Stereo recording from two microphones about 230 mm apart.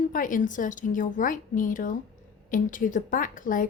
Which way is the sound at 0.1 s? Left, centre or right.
Left.